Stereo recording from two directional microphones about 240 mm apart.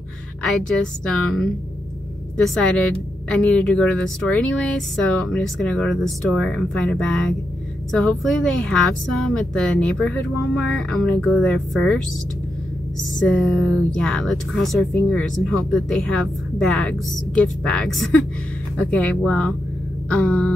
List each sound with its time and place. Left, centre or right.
1.0 s a woman's voice: centre
13.4 s a woman's voice: centre